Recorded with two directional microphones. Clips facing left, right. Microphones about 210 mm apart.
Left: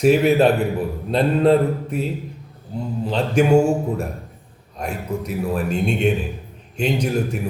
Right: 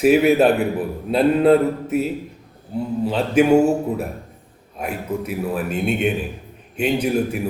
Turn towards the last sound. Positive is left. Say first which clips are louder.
# right 2 dB
turn(degrees=-5)  # may be behind; listen again after turning